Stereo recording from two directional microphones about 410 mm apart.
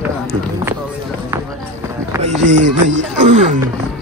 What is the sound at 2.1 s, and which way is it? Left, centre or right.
Speech, centre.